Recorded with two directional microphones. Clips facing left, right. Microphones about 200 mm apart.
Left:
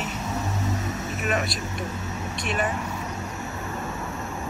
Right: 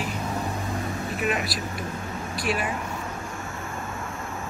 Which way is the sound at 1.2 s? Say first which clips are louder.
Even; 45° left (ahead or behind).